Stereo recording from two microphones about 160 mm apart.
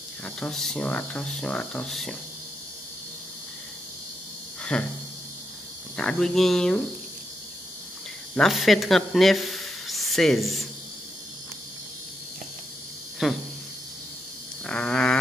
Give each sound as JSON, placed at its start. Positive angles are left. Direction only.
{"t": 0.2, "sound": "speech", "side_deg": 5}
{"t": 4.7, "sound": "speech", "side_deg": 5}
{"t": 5.9, "sound": "speech", "side_deg": 5}
{"t": 8.4, "sound": "speech", "side_deg": 0}
{"t": 13.2, "sound": "speech", "side_deg": 0}
{"t": 14.7, "sound": "a sound", "side_deg": 5}